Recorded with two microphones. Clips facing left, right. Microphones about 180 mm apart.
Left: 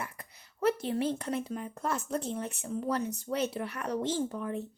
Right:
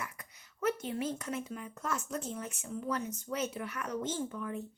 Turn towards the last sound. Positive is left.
turn(degrees=35)  # may be behind; listen again after turning